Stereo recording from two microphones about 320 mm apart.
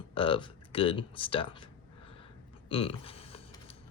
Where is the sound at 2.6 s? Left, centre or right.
Centre.